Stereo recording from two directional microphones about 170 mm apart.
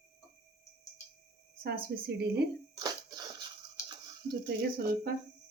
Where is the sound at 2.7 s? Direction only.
25° right (ahead or behind).